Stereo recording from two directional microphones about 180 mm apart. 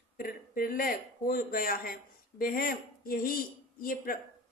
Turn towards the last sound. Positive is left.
turn(degrees=50)  # may be behind; listen again after turning